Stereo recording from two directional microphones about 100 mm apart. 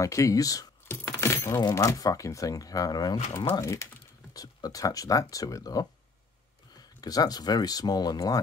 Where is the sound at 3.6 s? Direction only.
30° left (ahead or behind).